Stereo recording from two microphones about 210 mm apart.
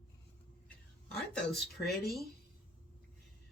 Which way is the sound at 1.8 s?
45° left (ahead or behind).